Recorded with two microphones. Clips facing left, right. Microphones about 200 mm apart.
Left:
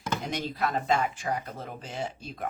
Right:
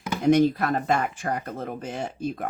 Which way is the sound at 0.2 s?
50° right (ahead or behind).